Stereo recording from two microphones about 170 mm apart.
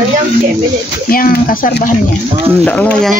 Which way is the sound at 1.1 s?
60° left (ahead or behind).